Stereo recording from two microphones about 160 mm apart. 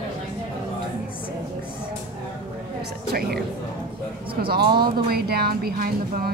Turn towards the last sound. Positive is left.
turn(degrees=-70)  # may be behind; listen again after turning